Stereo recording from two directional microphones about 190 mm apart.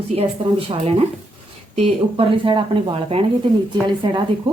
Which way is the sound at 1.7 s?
30° right (ahead or behind).